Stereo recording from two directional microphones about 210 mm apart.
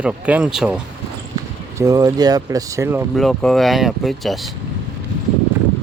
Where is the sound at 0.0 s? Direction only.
5° right (ahead or behind).